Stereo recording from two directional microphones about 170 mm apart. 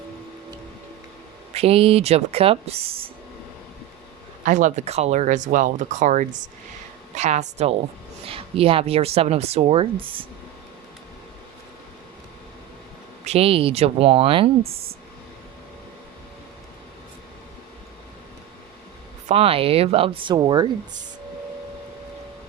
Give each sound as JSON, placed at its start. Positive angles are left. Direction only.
{"t": 1.5, "sound": "speech", "side_deg": -35}
{"t": 4.4, "sound": "speech", "side_deg": -45}
{"t": 13.2, "sound": "speech", "side_deg": -35}
{"t": 19.3, "sound": "speech", "side_deg": -35}